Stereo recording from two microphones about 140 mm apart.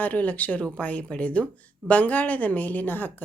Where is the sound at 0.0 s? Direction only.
10° left (ahead or behind).